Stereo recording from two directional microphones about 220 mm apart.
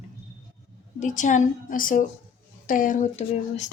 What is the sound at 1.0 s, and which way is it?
A woman's voice, 35° left (ahead or behind).